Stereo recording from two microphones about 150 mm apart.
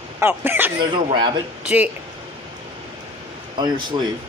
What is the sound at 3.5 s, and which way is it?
Speech, 30° right (ahead or behind).